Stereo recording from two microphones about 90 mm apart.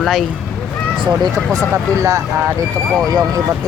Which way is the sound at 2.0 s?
35° right (ahead or behind).